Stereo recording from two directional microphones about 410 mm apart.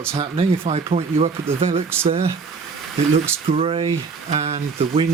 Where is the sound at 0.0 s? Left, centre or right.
Centre.